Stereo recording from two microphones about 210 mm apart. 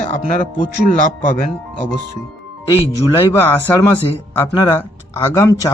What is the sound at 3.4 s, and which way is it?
Speech, 10° left (ahead or behind).